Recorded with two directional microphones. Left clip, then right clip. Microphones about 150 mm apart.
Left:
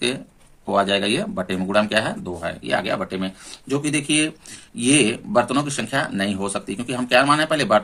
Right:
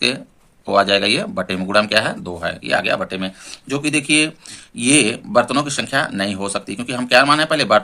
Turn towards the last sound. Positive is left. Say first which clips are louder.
# right 3 dB
turn(degrees=-25)  # may be behind; listen again after turning